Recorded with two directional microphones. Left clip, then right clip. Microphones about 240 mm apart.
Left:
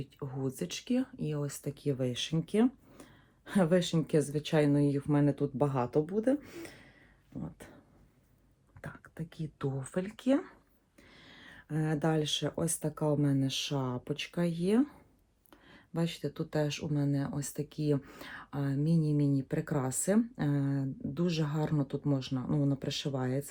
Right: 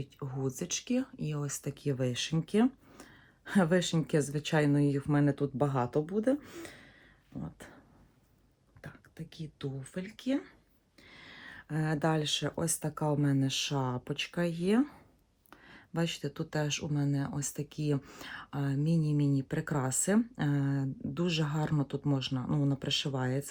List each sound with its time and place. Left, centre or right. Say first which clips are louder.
0.0 s speech: right 1 dB; right
7.3 s beatboxing: even; right
8.8 s a sound: left 4 dB; centre
9.3 s speech: left 4 dB; centre
11.1 s speech: right 4 dB; right
13.0 s speech: even; right